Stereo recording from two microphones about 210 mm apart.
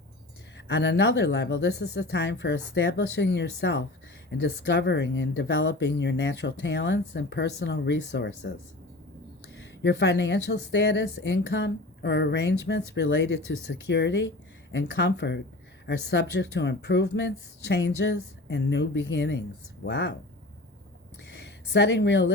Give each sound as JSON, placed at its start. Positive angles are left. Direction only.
{"t": 0.7, "sound": "a woman's voice", "side_deg": 55}
{"t": 9.8, "sound": "a woman's voice", "side_deg": 55}
{"t": 21.2, "sound": "a sound", "side_deg": 55}